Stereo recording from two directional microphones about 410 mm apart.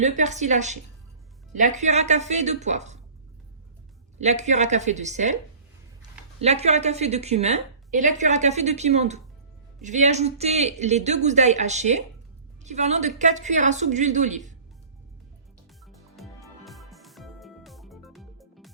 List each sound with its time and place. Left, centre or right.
0.0 s speech: centre
4.2 s speech: centre
15.9 s music: centre